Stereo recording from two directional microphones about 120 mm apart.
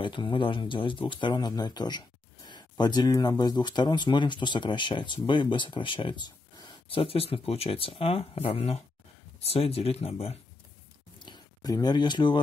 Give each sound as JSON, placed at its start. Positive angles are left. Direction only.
{"t": 0.0, "sound": "speech", "side_deg": 40}
{"t": 6.9, "sound": "speech", "side_deg": 50}
{"t": 11.1, "sound": "a sound", "side_deg": 40}